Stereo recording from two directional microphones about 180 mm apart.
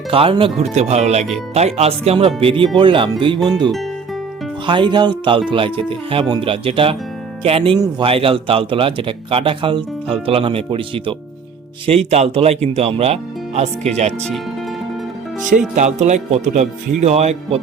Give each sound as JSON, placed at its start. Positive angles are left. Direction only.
{"t": 0.1, "sound": "speech", "side_deg": -30}
{"t": 12.1, "sound": "speech", "side_deg": -35}
{"t": 15.7, "sound": "speech", "side_deg": -40}